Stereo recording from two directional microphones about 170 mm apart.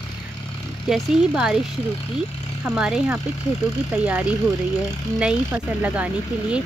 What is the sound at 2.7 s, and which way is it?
Speech, 5° right (ahead or behind).